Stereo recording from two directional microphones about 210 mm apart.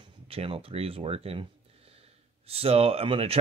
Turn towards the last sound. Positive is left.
turn(degrees=-25)  # may be behind; listen again after turning